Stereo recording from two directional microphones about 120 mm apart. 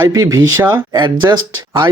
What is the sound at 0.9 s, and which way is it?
Speech, 40° right (ahead or behind).